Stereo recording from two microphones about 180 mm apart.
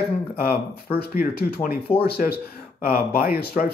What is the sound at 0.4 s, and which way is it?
Speech, 55° left (ahead or behind).